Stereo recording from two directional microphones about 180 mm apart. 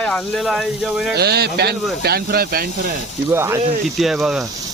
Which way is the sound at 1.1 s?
65° right (ahead or behind).